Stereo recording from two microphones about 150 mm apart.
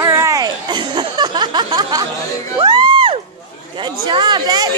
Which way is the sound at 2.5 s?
30° right (ahead or behind).